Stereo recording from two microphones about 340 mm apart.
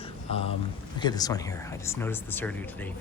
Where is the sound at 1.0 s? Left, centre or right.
Centre.